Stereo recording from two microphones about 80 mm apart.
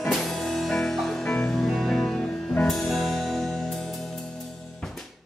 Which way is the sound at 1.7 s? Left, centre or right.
Centre.